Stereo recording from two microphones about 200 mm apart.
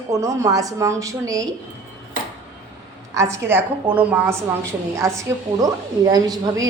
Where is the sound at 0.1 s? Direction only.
15° right (ahead or behind).